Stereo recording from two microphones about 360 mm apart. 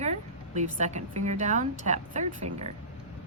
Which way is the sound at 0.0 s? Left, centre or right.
Centre.